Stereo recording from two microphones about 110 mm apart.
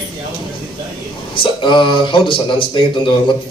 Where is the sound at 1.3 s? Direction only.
50° left (ahead or behind).